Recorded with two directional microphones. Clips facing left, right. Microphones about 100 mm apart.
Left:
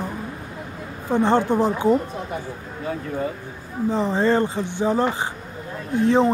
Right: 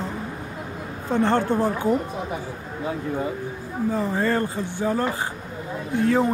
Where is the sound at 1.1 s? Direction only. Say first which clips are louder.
Left 2 dB; 15° left (ahead or behind).